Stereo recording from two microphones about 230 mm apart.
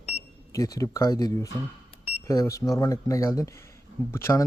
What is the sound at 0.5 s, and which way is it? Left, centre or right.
Speech, centre.